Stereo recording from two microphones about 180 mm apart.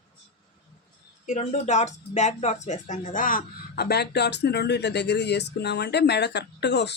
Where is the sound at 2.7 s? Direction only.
40° left (ahead or behind); by 6.9 s 70° left (ahead or behind).